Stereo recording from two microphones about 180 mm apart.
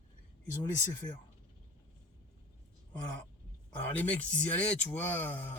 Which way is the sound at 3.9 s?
10° left (ahead or behind).